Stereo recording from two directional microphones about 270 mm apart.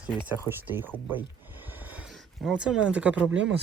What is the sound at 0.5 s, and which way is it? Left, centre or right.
Speech, centre.